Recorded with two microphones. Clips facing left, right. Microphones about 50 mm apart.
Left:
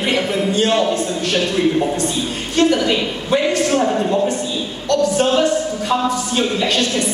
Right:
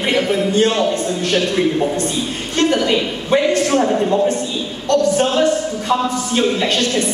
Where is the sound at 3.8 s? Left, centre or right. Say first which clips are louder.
Right 1 dB; centre.